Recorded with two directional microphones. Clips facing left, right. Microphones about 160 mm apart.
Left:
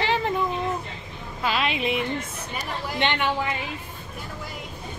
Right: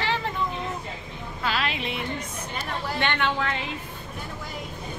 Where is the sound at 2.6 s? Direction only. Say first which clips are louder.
Left 1 dB; 15° left (ahead or behind).